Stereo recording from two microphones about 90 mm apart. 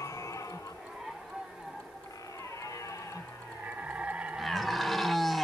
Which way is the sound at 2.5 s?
35° left (ahead or behind).